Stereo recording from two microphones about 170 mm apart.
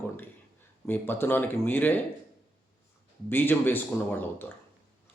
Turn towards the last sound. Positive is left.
turn(degrees=10)  # may be behind; listen again after turning